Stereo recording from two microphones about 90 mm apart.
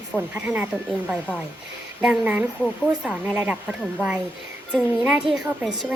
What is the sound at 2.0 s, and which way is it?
A woman's voice, 10° right (ahead or behind).